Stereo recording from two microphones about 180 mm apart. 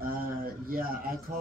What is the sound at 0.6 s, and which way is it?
Speech, 55° right (ahead or behind).